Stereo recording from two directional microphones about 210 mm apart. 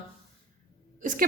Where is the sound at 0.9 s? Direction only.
40° right (ahead or behind).